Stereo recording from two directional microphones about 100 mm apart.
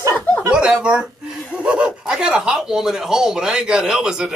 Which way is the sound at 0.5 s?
10° right (ahead or behind).